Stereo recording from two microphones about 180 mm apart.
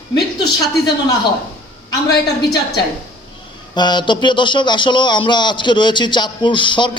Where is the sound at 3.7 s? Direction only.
25° left (ahead or behind).